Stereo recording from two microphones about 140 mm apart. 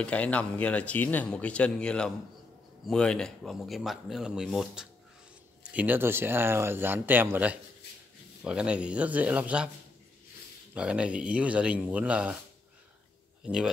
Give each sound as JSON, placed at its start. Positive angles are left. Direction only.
{"t": 0.0, "sound": "speech", "side_deg": 10}
{"t": 10.7, "sound": "speech", "side_deg": -10}
{"t": 13.4, "sound": "a man's voice", "side_deg": -5}